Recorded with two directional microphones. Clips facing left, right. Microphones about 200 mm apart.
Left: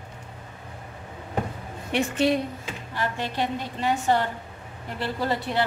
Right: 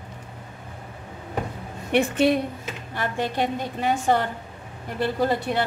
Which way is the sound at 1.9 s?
55° right (ahead or behind).